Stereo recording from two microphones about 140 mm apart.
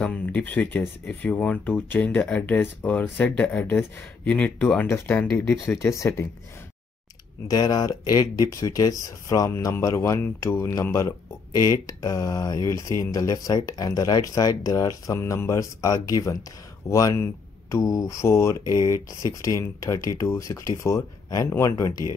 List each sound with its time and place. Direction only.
0.0 s speech: 10° left (ahead or behind)
7.4 s speech: 30° left (ahead or behind)